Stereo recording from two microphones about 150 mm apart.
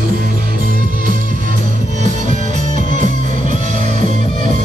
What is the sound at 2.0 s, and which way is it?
Music, 55° right (ahead or behind).